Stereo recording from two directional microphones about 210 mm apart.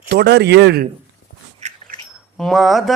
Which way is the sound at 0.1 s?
50° right (ahead or behind).